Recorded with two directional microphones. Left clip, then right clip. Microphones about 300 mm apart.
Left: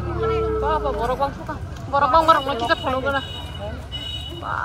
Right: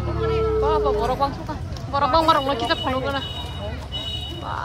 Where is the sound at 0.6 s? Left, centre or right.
Centre.